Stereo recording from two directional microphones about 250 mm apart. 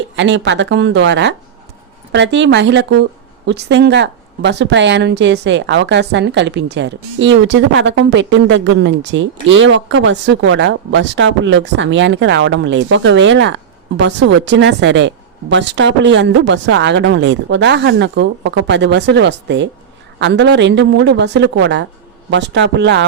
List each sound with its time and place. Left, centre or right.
0.2 s speech: right